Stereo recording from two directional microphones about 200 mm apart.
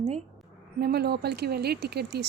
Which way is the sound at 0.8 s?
50° right (ahead or behind).